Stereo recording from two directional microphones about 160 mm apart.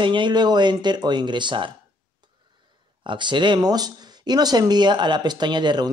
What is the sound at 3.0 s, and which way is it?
Speech, 30° right (ahead or behind).